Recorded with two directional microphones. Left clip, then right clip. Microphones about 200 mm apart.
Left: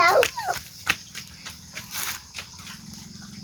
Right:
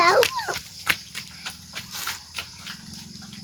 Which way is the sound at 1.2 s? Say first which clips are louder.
Right 4 dB; 10° left (ahead or behind).